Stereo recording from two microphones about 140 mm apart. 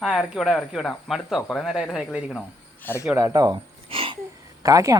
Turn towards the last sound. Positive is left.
turn(degrees=-25)  # may be behind; listen again after turning